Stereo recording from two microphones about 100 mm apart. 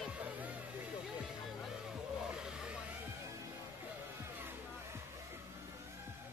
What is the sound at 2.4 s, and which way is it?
Music, 10° right (ahead or behind).